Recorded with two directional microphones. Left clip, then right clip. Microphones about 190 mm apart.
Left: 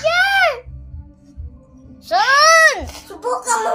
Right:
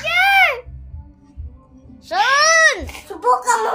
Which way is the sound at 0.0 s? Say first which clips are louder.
Right 1 dB; 10° right (ahead or behind).